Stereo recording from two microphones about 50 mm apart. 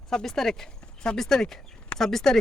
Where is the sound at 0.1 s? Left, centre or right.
Centre.